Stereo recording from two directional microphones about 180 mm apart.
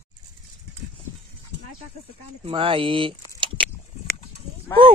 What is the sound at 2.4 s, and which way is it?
Speech, 30° right (ahead or behind).